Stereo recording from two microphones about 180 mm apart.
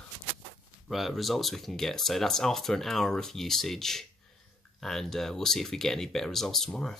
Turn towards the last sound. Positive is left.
turn(degrees=5)  # may be behind; listen again after turning